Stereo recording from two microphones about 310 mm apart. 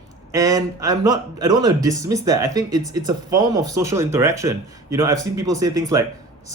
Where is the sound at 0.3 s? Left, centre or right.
Centre.